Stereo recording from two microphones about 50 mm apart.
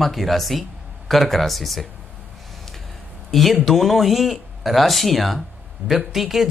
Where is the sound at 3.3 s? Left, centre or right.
Centre.